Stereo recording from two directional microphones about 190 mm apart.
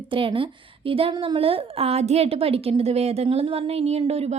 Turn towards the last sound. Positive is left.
turn(degrees=-30)  # may be behind; listen again after turning